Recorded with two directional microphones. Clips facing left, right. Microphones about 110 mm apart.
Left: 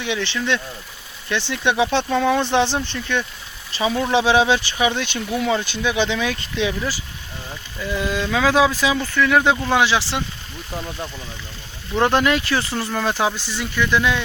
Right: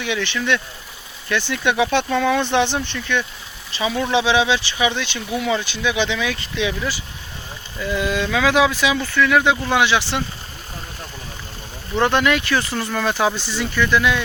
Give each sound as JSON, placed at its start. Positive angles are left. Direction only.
{"t": 0.0, "sound": "speech", "side_deg": 25}
{"t": 2.0, "sound": "speech", "side_deg": 10}
{"t": 2.3, "sound": "speech", "side_deg": 30}
{"t": 7.9, "sound": "speech", "side_deg": 25}
{"t": 11.9, "sound": "speech", "side_deg": 30}